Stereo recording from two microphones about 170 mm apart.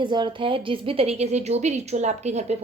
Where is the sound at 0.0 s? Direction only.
25° right (ahead or behind).